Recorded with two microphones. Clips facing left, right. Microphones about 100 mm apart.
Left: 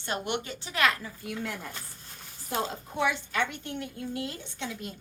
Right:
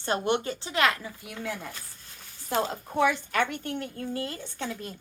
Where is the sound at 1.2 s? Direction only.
10° right (ahead or behind).